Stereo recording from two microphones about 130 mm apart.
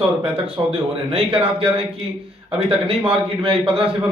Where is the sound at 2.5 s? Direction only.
50° right (ahead or behind).